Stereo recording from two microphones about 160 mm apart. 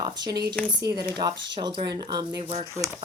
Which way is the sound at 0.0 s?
25° right (ahead or behind).